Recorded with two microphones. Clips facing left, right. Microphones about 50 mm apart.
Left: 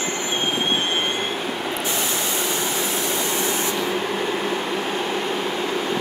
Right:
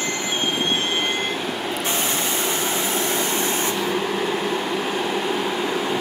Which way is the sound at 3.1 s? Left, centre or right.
Right.